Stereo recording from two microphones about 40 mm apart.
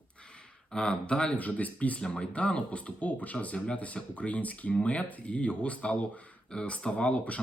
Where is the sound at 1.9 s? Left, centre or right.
Left.